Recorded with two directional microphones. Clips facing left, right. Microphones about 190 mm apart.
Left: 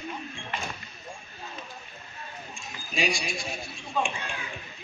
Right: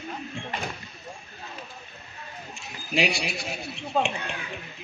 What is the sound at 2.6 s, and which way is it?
Speech, 65° right (ahead or behind).